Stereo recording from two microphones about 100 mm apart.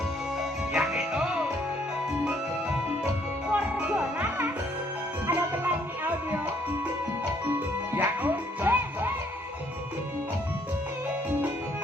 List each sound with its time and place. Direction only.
0.7 s music: 5° right (ahead or behind)
7.9 s music: 20° right (ahead or behind)